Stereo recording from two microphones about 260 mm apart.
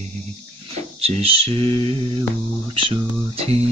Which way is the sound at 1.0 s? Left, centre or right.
Right.